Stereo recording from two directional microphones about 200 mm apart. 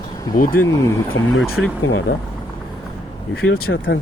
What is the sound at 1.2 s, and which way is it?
Speech, 80° left.